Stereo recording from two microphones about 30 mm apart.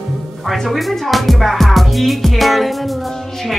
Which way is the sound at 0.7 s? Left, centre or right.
Centre.